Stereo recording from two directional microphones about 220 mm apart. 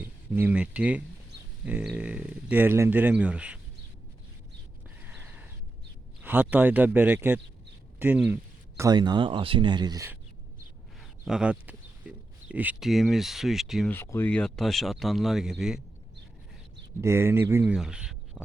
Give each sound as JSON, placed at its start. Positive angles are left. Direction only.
{"t": 0.0, "sound": "speech", "side_deg": -10}
{"t": 5.0, "sound": "a sound", "side_deg": -10}
{"t": 6.2, "sound": "speech", "side_deg": -10}
{"t": 8.8, "sound": "speech", "side_deg": -20}
{"t": 11.3, "sound": "speech", "side_deg": -5}
{"t": 13.9, "sound": "speech", "side_deg": 10}
{"t": 17.0, "sound": "speech", "side_deg": -10}